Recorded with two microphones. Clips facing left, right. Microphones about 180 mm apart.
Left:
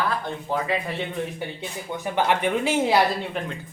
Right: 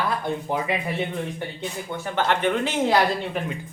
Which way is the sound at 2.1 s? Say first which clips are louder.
Even; 10° left (ahead or behind).